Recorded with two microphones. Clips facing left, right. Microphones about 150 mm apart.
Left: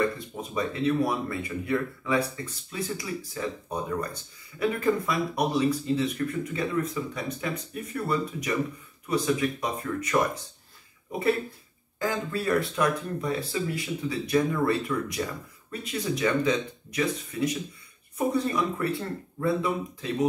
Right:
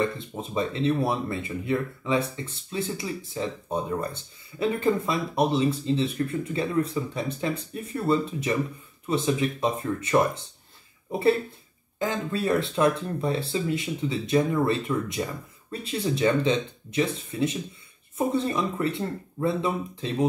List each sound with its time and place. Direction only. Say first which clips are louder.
0.0 s speech: even; 25° right (ahead or behind)